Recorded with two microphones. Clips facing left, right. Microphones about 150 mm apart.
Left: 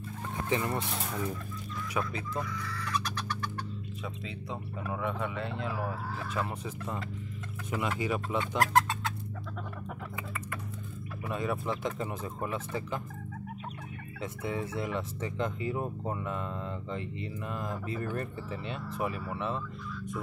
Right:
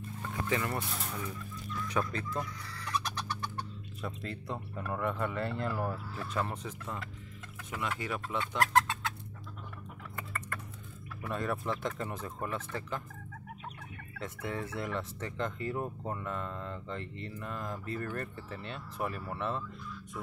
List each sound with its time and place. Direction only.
0.5 s speech: 20° left (ahead or behind)
2.0 s speech: 5° left (ahead or behind)
2.4 s speech: 90° left
2.8 s chicken: 20° right (ahead or behind)
4.0 s speech: centre (ahead or behind)
10.1 s a sound: 5° left (ahead or behind)
11.2 s speech: 5° left (ahead or behind)
14.2 s speech: 5° left (ahead or behind)